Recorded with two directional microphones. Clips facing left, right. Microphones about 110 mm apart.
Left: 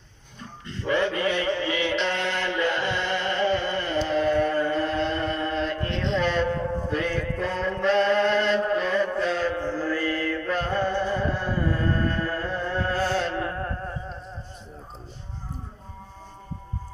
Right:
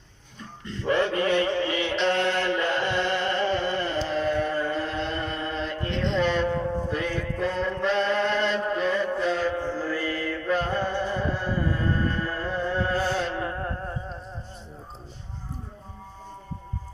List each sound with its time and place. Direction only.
0.9 s music: 40° right (ahead or behind)
4.1 s a capella: centre (ahead or behind)
6.1 s music: 10° right (ahead or behind)